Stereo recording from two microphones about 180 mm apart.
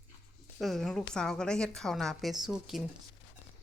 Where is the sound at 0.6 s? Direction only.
Centre (ahead or behind).